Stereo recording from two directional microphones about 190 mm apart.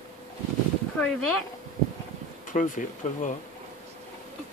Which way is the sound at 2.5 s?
45° left (ahead or behind).